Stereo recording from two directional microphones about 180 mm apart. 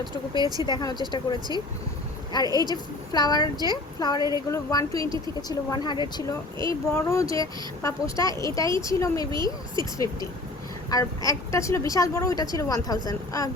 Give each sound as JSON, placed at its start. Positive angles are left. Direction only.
{"t": 0.3, "sound": "speech", "side_deg": -20}
{"t": 0.6, "sound": "speech", "side_deg": 25}
{"t": 2.5, "sound": "speech", "side_deg": -20}
{"t": 3.1, "sound": "speech", "side_deg": 20}
{"t": 10.9, "sound": "speech", "side_deg": 20}